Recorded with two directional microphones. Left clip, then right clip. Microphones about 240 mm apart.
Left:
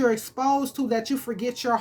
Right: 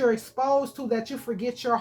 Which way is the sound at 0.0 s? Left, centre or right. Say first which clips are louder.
Left 1 dB; left.